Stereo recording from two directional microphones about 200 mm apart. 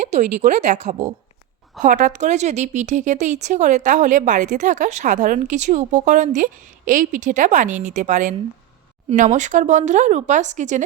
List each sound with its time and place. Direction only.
0.1 s a woman's voice: 35° right (ahead or behind)